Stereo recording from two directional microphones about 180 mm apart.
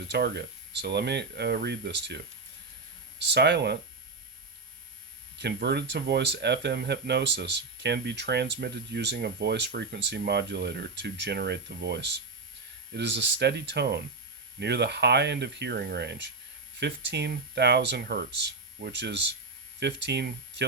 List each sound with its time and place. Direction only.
0.1 s speech: 70° right (ahead or behind)
3.2 s speech: 70° right (ahead or behind)
5.4 s speech: 65° right (ahead or behind)